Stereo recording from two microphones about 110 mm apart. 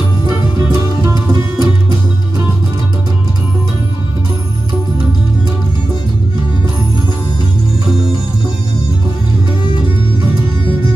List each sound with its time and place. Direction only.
1.0 s music: 35° right (ahead or behind)